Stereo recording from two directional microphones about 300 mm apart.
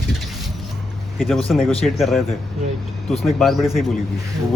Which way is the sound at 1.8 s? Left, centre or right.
Centre.